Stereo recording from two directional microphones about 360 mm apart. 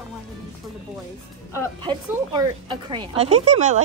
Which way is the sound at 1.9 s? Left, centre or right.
Centre.